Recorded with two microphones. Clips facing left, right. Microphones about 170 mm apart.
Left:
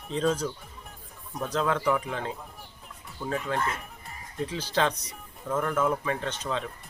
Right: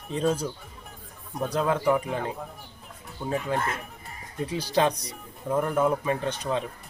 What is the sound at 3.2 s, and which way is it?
Speech, 15° right (ahead or behind).